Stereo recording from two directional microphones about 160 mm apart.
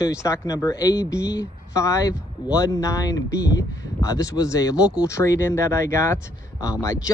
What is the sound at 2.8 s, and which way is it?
Speech, 20° left (ahead or behind).